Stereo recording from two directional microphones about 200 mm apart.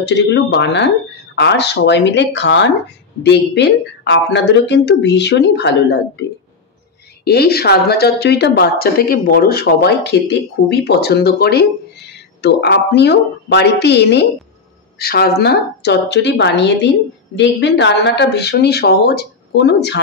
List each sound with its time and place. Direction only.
0.0 s speech: 60° left (ahead or behind)
7.2 s a woman's voice: 50° left (ahead or behind)